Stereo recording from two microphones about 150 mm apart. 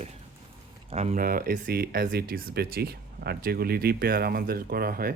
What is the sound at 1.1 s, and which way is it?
Speech, 75° right (ahead or behind).